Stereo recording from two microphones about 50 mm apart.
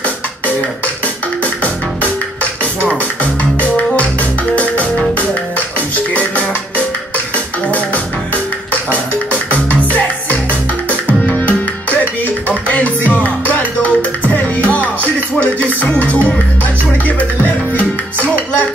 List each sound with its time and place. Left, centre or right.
1.0 s music: left
5.9 s music: left
11.4 s music: left